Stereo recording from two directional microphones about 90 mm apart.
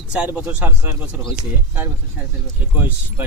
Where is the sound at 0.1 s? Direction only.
15° right (ahead or behind).